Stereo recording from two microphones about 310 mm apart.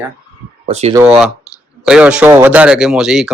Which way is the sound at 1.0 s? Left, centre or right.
Centre.